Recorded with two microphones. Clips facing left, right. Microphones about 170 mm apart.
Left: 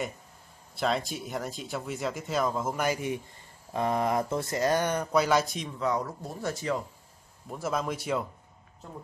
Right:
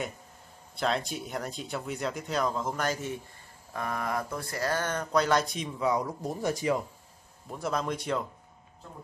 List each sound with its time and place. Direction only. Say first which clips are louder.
0.7 s speech: left 1 dB; centre (ahead or behind)
5.8 s speech: right 1 dB; 10° right (ahead or behind)
7.5 s speech: even; 5° left (ahead or behind)